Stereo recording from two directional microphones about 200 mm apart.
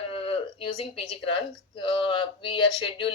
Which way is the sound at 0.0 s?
25° left (ahead or behind).